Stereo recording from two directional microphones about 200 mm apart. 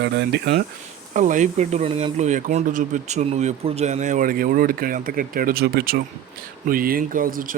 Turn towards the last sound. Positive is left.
turn(degrees=-45)  # may be behind; listen again after turning